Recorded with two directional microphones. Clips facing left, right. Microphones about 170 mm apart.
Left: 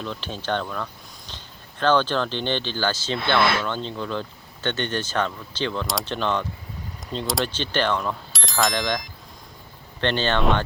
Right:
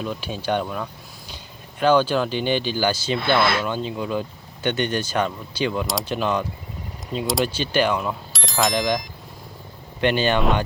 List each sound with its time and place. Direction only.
0.0 s speech: 10° right (ahead or behind)
8.3 s speech: centre (ahead or behind)